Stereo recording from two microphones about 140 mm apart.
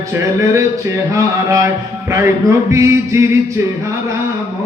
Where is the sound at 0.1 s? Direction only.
20° right (ahead or behind).